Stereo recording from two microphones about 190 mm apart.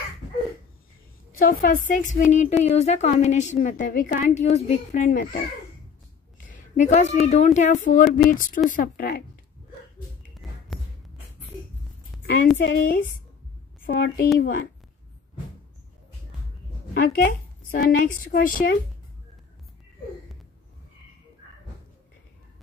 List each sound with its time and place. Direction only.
1.4 s a woman's voice: 45° left (ahead or behind)
6.4 s a woman's voice: 40° left (ahead or behind)
10.4 s music: centre (ahead or behind)
12.5 s a woman's voice: 50° left (ahead or behind)
16.9 s a woman's voice: 45° left (ahead or behind)